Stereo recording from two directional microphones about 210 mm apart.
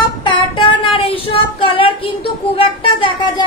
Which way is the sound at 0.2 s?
25° left (ahead or behind).